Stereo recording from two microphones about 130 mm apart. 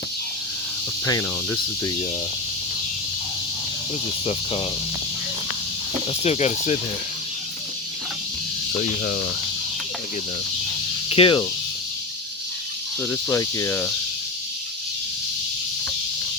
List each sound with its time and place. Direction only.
6.2 s speech: 60° left (ahead or behind)
8.8 s speech: 90° left
11.1 s speech: 40° left (ahead or behind)
13.0 s speech: 15° left (ahead or behind)